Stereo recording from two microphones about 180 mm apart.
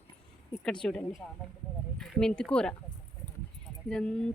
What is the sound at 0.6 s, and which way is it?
A woman's voice, 5° left (ahead or behind).